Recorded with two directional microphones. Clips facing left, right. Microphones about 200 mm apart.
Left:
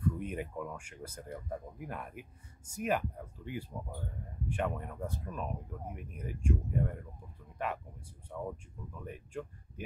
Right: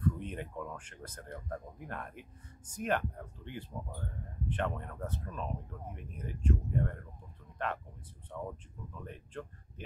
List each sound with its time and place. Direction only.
0.0 s speech: 10° left (ahead or behind)